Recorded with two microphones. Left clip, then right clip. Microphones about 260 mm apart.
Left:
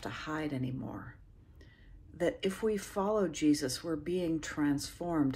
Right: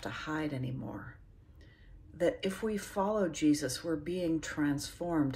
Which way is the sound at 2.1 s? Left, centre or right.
Centre.